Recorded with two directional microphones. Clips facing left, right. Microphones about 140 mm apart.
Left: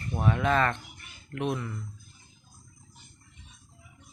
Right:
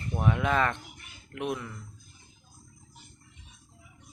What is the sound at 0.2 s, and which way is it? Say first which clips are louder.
Speech: left 1 dB; 10° right (ahead or behind).